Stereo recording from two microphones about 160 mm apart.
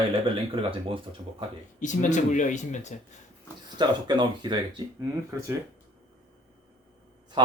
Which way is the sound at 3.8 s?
30° right (ahead or behind).